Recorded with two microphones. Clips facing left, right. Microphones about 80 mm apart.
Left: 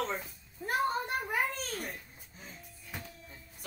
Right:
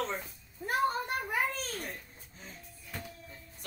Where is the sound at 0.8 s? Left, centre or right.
Centre.